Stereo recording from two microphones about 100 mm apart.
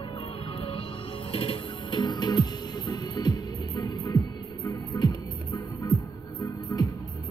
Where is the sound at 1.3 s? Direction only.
60° left (ahead or behind); by 6.0 s 40° left (ahead or behind).